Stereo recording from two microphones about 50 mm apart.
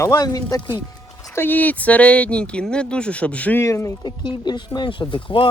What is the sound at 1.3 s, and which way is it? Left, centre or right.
Speech, left.